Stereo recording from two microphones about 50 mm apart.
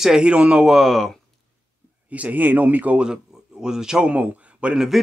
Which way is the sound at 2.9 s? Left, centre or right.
Centre.